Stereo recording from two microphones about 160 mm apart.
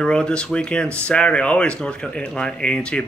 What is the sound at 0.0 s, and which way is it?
Speech, 5° left (ahead or behind).